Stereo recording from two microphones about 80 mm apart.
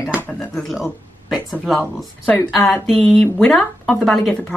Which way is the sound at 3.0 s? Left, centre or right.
Centre.